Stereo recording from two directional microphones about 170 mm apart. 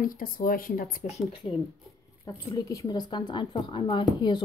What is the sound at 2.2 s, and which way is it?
A woman's voice, 20° left (ahead or behind).